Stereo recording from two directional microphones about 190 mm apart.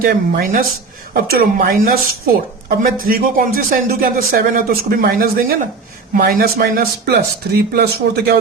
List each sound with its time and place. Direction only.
0.0 s a woman's voice: 50° right (ahead or behind)